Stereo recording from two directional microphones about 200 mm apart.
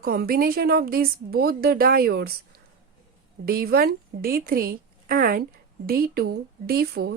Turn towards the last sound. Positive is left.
turn(degrees=-50)  # may be behind; listen again after turning